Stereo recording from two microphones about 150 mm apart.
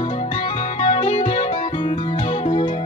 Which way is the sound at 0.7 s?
40° left (ahead or behind).